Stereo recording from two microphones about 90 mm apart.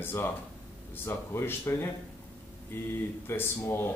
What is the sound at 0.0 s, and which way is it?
Speech, 25° left (ahead or behind).